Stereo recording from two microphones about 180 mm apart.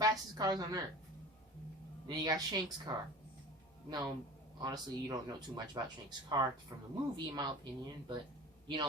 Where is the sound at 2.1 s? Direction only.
20° right (ahead or behind).